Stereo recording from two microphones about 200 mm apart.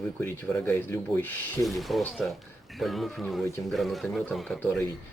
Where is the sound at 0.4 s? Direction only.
10° left (ahead or behind).